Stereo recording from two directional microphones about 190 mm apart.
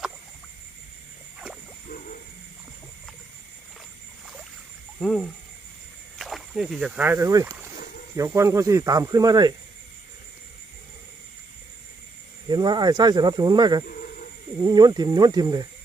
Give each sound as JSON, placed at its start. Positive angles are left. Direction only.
{"t": 4.9, "sound": "speech", "side_deg": 0}
{"t": 12.5, "sound": "speech", "side_deg": -20}